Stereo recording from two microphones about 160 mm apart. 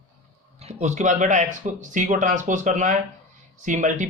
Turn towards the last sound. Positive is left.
turn(degrees=-50)  # may be behind; listen again after turning